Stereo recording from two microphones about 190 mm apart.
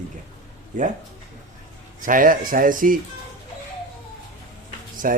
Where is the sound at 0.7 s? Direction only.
40° right (ahead or behind).